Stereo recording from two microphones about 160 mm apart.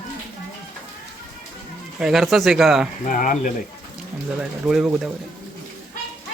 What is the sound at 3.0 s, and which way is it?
Speech, 55° left (ahead or behind).